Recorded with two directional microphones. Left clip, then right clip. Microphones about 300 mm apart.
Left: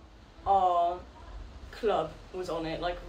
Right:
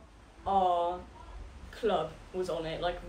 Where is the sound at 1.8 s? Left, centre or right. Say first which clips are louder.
Left 2 dB; centre.